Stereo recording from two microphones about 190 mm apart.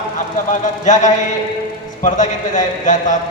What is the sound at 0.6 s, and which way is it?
A man's voice, 40° left (ahead or behind).